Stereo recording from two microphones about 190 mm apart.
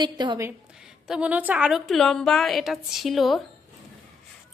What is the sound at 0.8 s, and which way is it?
A woman's voice, 5° right (ahead or behind).